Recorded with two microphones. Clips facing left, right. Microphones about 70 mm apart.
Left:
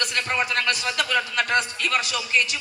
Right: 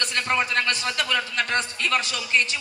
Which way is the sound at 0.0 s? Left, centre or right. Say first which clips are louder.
Right 1 dB; right.